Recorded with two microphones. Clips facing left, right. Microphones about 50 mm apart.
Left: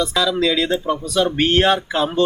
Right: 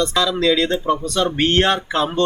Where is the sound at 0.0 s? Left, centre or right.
Centre.